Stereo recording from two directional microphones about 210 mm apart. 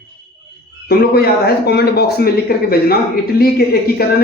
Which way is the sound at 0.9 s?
45° left (ahead or behind).